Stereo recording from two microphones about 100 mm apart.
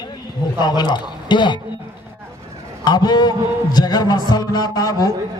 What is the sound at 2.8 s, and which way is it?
A man's voice, 45° left (ahead or behind).